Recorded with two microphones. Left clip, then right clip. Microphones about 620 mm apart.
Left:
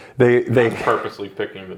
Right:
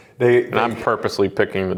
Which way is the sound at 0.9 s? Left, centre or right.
Right.